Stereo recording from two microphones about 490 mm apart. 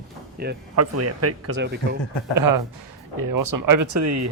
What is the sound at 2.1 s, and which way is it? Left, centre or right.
Speech, left.